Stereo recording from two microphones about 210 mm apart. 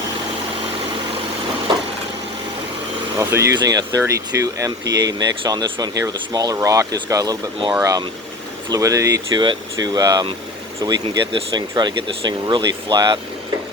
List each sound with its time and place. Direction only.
3.2 s speech: 15° right (ahead or behind)